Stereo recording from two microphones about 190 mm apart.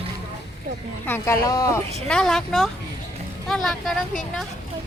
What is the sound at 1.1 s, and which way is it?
Speech, 15° left (ahead or behind).